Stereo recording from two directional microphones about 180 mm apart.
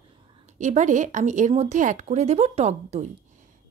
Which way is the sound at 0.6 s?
40° right (ahead or behind).